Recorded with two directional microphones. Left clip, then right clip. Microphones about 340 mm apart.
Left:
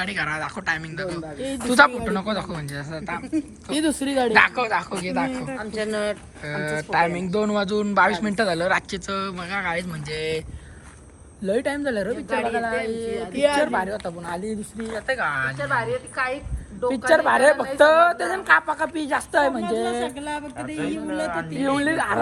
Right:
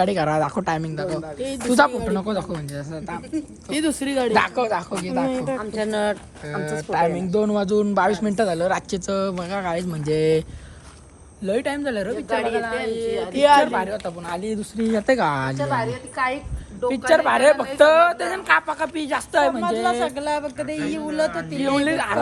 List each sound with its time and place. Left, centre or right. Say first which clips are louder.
0.0 s a man's voice: right 6 dB; centre
1.4 s a woman's voice: right 2 dB; centre
1.7 s a man's voice: left 1 dB; centre
3.8 s speech: even; centre
4.4 s a man's voice: left 4 dB; centre
5.5 s a man's voice: right 3 dB; right
6.5 s a man's voice: left 1 dB; centre
11.4 s a woman's voice: even; centre
13.1 s a man's voice: right 6 dB; right
13.6 s a woman's voice: right 3 dB; centre
14.9 s a man's voice: right 4 dB; centre
16.8 s a woman's voice: right 1 dB; centre
20.1 s a man's voice: right 6 dB; right
20.7 s a woman's voice: right 2 dB; centre